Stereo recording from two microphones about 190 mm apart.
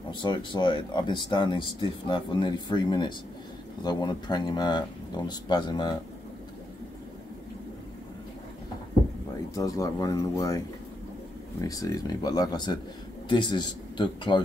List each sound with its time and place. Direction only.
0.1 s speech: 25° left (ahead or behind)
9.6 s speech: 20° left (ahead or behind)
11.6 s speech: 20° left (ahead or behind)